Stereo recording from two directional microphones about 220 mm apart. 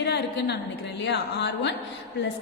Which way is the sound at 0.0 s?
50° left (ahead or behind).